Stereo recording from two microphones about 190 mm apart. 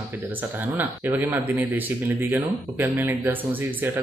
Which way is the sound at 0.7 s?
10° right (ahead or behind).